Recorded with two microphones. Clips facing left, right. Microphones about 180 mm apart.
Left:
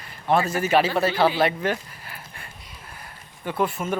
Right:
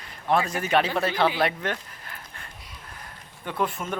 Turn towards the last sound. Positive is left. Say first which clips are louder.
# left 3 dB
turn(degrees=5)  # may be behind; listen again after turning